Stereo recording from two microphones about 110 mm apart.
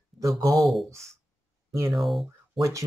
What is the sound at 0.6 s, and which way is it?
Speech, centre (ahead or behind).